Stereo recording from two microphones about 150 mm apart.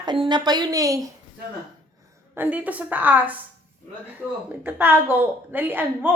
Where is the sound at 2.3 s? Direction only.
10° right (ahead or behind).